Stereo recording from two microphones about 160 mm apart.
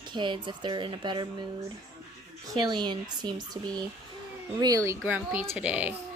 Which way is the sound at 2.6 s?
30° right (ahead or behind).